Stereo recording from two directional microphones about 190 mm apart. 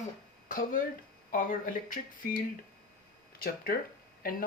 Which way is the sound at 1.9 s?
45° left (ahead or behind).